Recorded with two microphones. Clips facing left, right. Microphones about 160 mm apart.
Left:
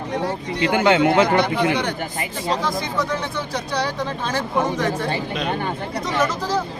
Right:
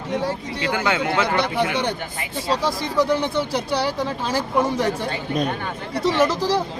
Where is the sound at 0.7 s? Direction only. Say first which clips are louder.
Left 6 dB; 25° left (ahead or behind).